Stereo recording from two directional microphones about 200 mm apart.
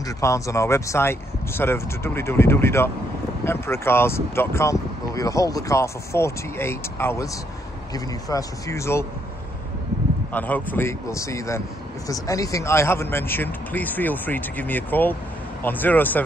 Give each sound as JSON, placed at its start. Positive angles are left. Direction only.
{"t": 0.2, "sound": "speech", "side_deg": 15}
{"t": 10.3, "sound": "speech", "side_deg": 10}